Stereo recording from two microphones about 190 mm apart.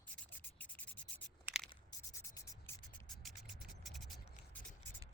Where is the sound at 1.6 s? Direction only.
20° left (ahead or behind).